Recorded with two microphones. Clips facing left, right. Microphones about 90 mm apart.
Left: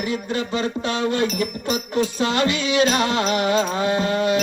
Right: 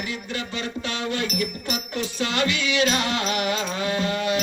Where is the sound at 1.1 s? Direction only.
35° left (ahead or behind).